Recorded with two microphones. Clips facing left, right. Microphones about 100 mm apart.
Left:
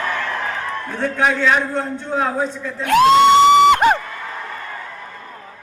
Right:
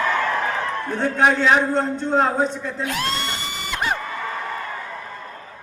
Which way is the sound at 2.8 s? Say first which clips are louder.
Left 16 dB; 80° left.